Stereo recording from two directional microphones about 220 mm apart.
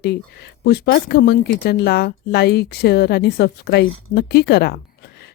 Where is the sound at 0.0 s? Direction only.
50° left (ahead or behind).